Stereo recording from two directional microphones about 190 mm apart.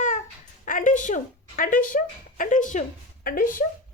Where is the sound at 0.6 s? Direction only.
45° left (ahead or behind).